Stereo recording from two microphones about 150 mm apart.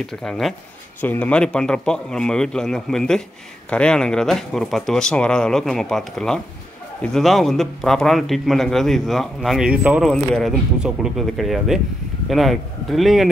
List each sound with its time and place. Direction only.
0.0 s a man's voice: 5° left (ahead or behind)